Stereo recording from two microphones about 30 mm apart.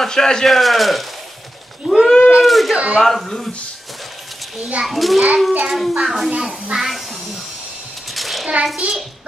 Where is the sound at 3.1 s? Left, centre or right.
Centre.